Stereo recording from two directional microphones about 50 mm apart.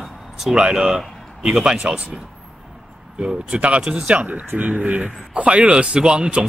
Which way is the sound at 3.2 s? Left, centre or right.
Centre.